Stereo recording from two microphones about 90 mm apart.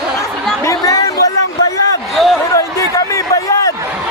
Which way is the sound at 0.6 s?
40° left (ahead or behind).